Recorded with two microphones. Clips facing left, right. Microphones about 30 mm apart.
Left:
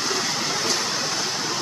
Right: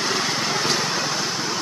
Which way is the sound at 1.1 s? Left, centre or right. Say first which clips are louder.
Right 1 dB; centre.